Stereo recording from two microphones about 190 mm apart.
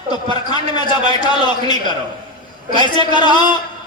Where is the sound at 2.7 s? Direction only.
25° left (ahead or behind).